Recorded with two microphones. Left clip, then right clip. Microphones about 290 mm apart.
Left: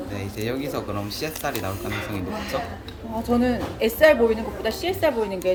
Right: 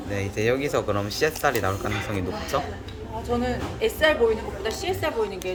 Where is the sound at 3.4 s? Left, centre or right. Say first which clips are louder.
Left 2 dB; left.